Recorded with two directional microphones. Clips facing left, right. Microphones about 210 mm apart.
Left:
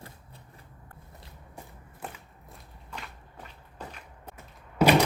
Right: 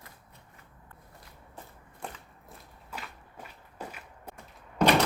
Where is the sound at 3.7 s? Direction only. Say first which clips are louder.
Right 1 dB; 10° right (ahead or behind).